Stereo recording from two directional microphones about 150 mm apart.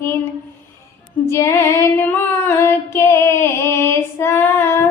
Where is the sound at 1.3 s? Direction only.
15° left (ahead or behind).